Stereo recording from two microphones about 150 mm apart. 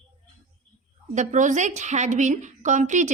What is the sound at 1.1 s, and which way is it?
A woman's voice, 55° right (ahead or behind).